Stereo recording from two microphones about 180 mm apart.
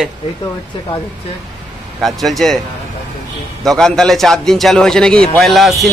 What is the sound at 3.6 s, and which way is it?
A man's voice, centre (ahead or behind).